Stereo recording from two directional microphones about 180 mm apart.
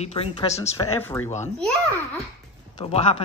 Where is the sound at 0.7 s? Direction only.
15° left (ahead or behind).